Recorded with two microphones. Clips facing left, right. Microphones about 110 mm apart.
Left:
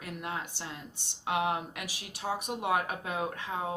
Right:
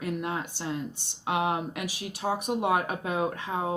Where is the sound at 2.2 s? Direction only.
40° right (ahead or behind).